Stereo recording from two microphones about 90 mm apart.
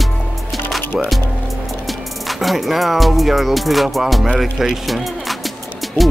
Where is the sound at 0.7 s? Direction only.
Centre (ahead or behind).